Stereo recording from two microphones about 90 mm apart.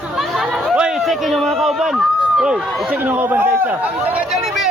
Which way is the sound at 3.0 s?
20° right (ahead or behind).